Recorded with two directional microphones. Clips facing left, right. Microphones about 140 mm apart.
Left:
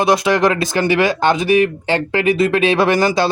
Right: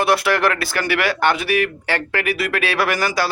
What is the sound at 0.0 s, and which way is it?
A man's voice, 15° left (ahead or behind).